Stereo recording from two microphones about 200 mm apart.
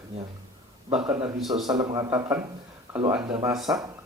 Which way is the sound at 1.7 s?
15° right (ahead or behind).